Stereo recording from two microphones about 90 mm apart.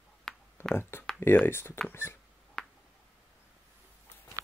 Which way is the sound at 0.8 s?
25° left (ahead or behind).